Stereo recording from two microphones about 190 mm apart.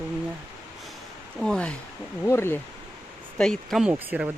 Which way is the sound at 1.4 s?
5° left (ahead or behind).